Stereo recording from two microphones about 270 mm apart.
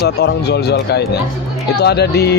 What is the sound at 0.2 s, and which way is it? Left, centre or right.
Speech, left.